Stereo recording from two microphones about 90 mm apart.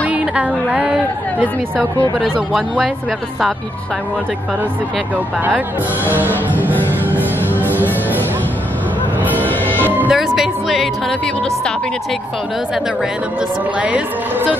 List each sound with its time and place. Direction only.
0.0 s a woman's voice: 15° right (ahead or behind)
6.0 s music: 20° right (ahead or behind)
9.2 s music: 20° right (ahead or behind)
9.5 s music: 20° left (ahead or behind)
9.8 s music: 20° right (ahead or behind)
10.1 s music: 5° right (ahead or behind)
13.7 s a woman's voice: 15° right (ahead or behind)